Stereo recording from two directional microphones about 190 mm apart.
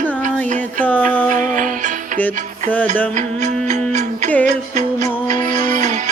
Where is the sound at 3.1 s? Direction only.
40° right (ahead or behind).